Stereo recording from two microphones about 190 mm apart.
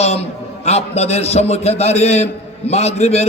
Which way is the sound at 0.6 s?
35° left (ahead or behind).